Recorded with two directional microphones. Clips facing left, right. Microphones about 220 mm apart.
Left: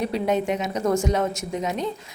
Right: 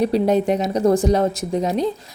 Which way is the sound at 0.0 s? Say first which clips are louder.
Right 6 dB; 35° right (ahead or behind).